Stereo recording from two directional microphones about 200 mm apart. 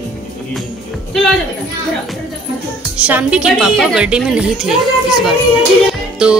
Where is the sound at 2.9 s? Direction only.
5° right (ahead or behind).